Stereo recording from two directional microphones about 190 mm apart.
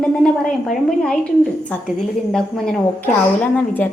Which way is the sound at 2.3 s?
Centre (ahead or behind).